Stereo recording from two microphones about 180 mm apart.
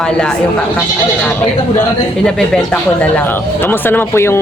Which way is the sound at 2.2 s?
5° left (ahead or behind).